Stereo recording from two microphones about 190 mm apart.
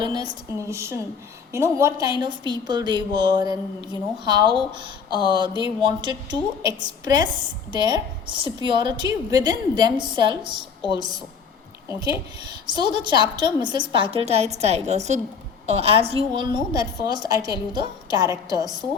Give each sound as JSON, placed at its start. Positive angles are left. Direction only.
{"t": 0.0, "sound": "a sound", "side_deg": -25}
{"t": 0.7, "sound": "a woman's voice", "side_deg": -15}
{"t": 11.9, "sound": "speech", "side_deg": 25}
{"t": 12.6, "sound": "a woman's voice", "side_deg": -20}